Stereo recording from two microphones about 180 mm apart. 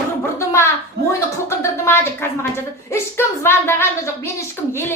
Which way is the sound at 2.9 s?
15° left (ahead or behind).